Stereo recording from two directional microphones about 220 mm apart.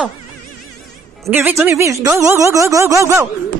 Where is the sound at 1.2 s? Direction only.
10° right (ahead or behind).